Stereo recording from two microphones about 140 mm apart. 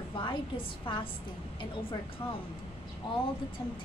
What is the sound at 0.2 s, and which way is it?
Speech, 35° left (ahead or behind).